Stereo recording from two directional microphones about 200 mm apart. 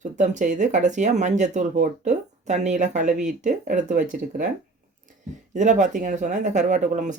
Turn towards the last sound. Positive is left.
turn(degrees=-40)  # may be behind; listen again after turning